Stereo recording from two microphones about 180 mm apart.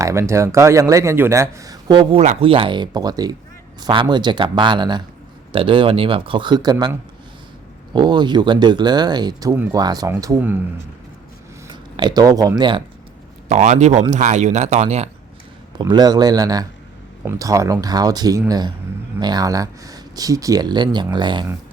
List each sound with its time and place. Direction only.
0.0 s speech: 15° right (ahead or behind)
7.9 s speech: 25° right (ahead or behind)
11.7 s speech: 25° right (ahead or behind)
13.5 s speech: 40° right (ahead or behind)
15.8 s speech: 20° right (ahead or behind)